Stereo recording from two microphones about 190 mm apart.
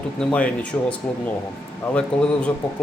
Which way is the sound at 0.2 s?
5° left (ahead or behind).